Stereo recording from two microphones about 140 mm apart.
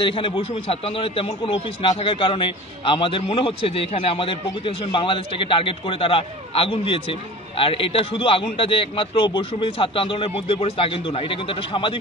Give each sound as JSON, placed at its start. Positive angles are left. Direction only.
{"t": 0.0, "sound": "a man's voice", "side_deg": 40}